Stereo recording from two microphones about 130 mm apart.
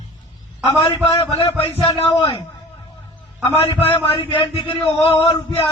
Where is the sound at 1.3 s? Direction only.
45° left (ahead or behind).